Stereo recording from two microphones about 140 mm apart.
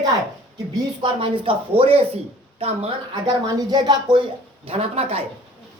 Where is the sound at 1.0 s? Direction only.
40° right (ahead or behind).